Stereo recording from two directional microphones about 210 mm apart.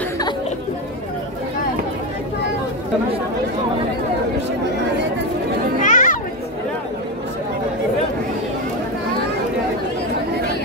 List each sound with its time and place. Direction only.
5.8 s children playing: 35° left (ahead or behind)